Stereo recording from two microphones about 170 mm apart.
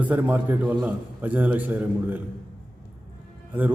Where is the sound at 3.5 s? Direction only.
10° right (ahead or behind).